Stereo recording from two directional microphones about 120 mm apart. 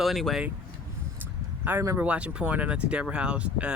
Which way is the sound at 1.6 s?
20° right (ahead or behind).